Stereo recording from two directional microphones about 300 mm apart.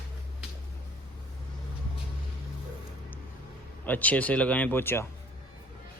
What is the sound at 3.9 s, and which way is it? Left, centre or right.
Speech, centre.